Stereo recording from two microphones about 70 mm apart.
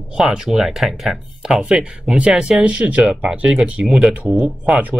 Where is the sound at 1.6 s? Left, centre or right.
Centre.